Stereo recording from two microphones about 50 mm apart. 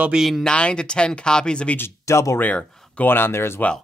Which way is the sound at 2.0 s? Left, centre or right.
Left.